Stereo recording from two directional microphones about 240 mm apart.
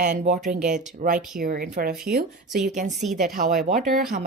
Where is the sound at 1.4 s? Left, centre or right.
Right.